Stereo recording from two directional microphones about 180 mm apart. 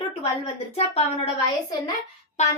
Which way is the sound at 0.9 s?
35° left (ahead or behind).